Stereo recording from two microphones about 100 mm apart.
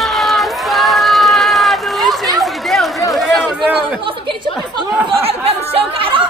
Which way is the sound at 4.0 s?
60° right (ahead or behind).